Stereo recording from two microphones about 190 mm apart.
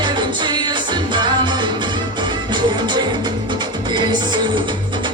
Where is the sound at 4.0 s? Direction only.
25° right (ahead or behind).